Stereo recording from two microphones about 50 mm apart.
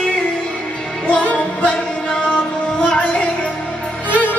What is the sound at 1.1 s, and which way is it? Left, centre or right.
Music, left.